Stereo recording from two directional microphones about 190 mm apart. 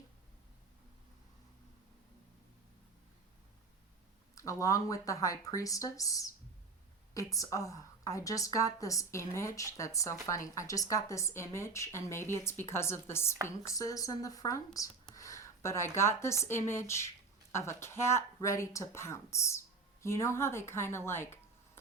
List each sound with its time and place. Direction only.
4.4 s a woman's voice: 15° left (ahead or behind)